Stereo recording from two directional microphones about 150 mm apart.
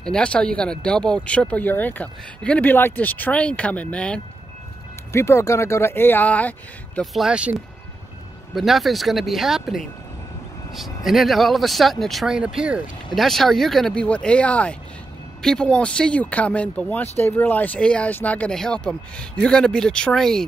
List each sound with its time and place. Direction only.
0.0 s speech: 5° left (ahead or behind)
5.1 s speech: 20° left (ahead or behind)
7.0 s speech: 5° right (ahead or behind)
8.5 s speech: centre (ahead or behind)
11.1 s speech: centre (ahead or behind)